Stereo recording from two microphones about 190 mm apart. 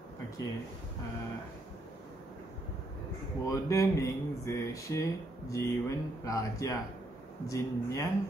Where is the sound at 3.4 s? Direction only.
15° left (ahead or behind).